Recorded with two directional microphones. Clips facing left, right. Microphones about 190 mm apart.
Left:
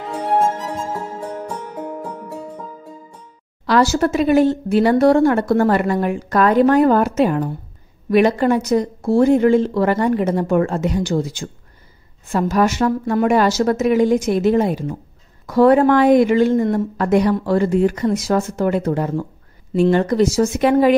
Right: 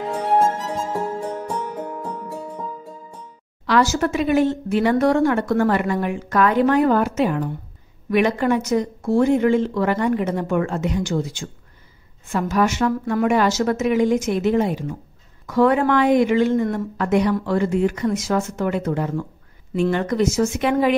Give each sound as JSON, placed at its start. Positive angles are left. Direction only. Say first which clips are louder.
{"t": 3.6, "sound": "speech", "louder": "left 3 dB", "side_deg": 35}